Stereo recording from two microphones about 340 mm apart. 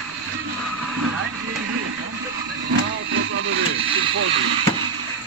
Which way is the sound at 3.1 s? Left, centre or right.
Right.